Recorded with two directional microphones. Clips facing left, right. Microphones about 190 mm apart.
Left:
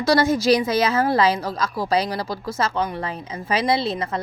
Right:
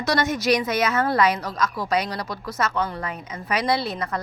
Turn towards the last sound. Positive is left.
turn(degrees=25)  # may be behind; listen again after turning